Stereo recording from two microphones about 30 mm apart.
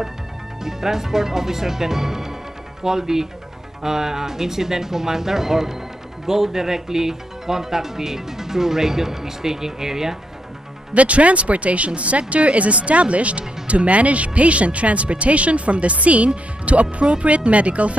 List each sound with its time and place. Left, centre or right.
0.7 s speech: centre
10.9 s speech: right
16.8 s speech: right
17.5 s speech: right